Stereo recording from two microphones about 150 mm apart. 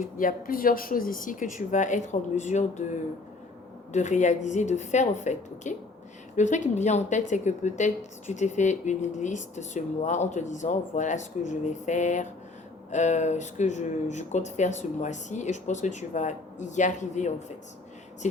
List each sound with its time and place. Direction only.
0.0 s a woman's voice: 65° left (ahead or behind)